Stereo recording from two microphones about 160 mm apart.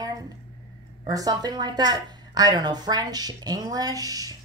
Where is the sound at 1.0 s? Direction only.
25° right (ahead or behind).